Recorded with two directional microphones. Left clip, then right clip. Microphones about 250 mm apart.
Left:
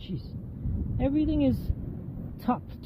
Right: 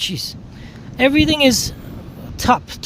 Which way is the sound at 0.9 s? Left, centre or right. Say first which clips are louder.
Right 13 dB; right.